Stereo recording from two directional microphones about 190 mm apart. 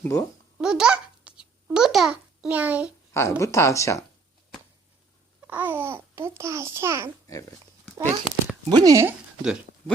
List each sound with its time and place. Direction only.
0.0 s speech: 15° left (ahead or behind)
0.6 s a child's voice: 5° right (ahead or behind)
3.1 s speech: 15° left (ahead or behind)
5.5 s a child's voice: 10° right (ahead or behind)